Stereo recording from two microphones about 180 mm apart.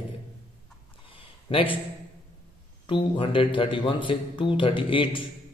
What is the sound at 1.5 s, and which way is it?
Speech, 30° left (ahead or behind).